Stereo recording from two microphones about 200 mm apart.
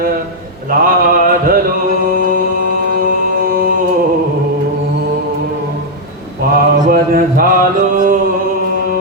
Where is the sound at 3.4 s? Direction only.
45° right (ahead or behind).